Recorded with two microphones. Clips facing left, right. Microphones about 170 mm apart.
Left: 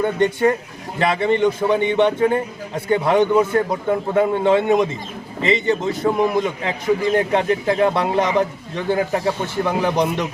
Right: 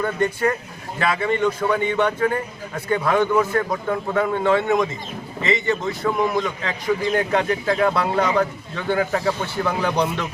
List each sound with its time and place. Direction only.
0.0 s a man's voice: 25° left (ahead or behind)